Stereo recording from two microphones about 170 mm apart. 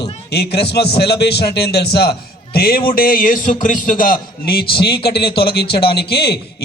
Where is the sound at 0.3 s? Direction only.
70° left (ahead or behind).